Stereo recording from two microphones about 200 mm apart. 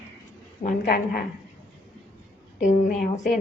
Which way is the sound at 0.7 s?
50° left (ahead or behind).